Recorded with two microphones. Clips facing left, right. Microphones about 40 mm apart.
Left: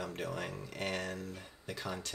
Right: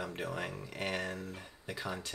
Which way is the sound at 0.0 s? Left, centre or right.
Centre.